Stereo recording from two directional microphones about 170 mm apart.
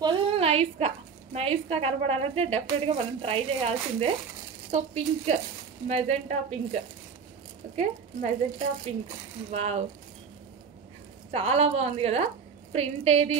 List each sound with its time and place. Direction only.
0.0 s a woman's voice: 30° right (ahead or behind)
11.3 s a woman's voice: 35° right (ahead or behind)